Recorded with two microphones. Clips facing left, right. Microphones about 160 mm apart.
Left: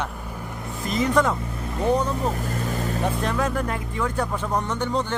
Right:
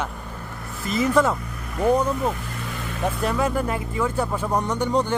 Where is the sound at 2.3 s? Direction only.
40° left (ahead or behind).